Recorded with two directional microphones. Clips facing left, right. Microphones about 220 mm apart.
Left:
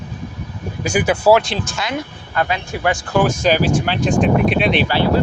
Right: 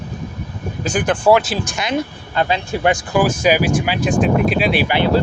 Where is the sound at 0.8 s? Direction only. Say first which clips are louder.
Left 1 dB; 10° left (ahead or behind).